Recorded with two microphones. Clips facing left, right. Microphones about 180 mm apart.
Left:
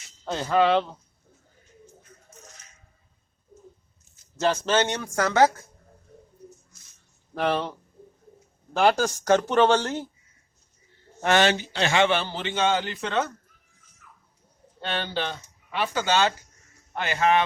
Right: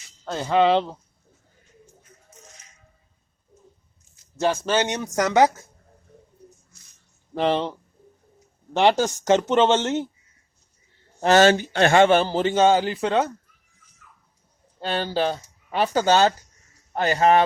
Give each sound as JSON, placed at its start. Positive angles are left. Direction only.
{"t": 0.3, "sound": "speech", "side_deg": -5}
{"t": 0.5, "sound": "speech", "side_deg": -25}
{"t": 4.4, "sound": "speech", "side_deg": -10}
{"t": 7.3, "sound": "speech", "side_deg": -20}
{"t": 8.7, "sound": "speech", "side_deg": -20}
{"t": 11.2, "sound": "a man's voice", "side_deg": -40}
{"t": 14.8, "sound": "a man's voice", "side_deg": -35}